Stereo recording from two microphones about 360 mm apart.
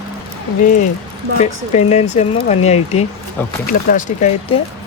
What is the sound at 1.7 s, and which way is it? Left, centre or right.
Speech, centre.